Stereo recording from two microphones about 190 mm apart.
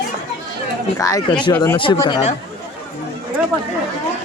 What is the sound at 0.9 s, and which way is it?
Speech, 15° left (ahead or behind).